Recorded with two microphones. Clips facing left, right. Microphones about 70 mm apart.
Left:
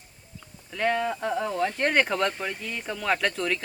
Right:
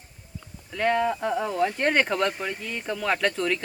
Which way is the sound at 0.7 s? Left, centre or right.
Centre.